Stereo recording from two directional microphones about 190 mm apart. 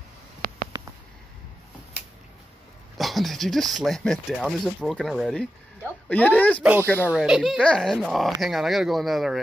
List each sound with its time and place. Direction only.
0.7 s a sound: 25° right (ahead or behind)
3.0 s speech: centre (ahead or behind)
6.6 s speech: 10° right (ahead or behind)